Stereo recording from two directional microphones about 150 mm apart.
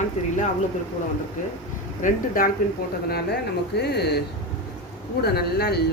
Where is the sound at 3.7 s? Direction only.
90° left.